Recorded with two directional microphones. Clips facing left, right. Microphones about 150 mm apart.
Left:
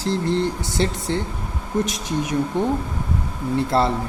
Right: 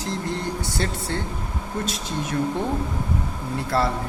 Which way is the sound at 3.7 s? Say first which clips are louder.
Left 3 dB; 25° left (ahead or behind).